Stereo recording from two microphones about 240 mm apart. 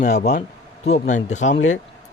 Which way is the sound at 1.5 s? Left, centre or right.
Left.